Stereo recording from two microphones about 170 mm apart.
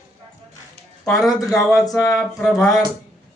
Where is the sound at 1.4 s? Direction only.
20° left (ahead or behind).